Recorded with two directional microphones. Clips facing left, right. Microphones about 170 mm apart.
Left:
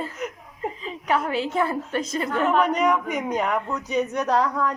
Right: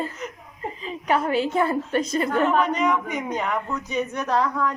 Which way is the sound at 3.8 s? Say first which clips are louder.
Left 3 dB; 35° left (ahead or behind).